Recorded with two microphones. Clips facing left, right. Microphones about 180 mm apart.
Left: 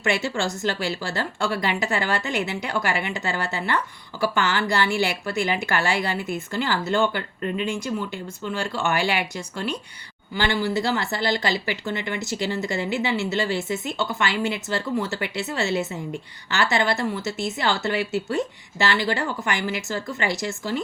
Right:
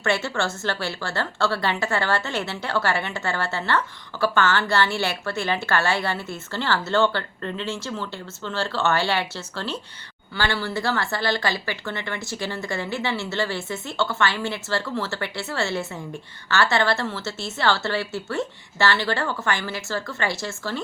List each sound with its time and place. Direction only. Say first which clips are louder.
0.0 s a woman's voice: even; 15° left (ahead or behind)